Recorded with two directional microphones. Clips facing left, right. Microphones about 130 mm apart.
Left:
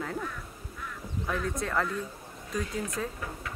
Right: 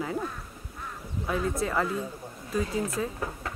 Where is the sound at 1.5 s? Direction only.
5° right (ahead or behind).